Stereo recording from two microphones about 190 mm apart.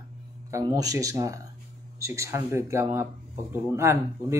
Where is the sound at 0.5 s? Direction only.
15° right (ahead or behind).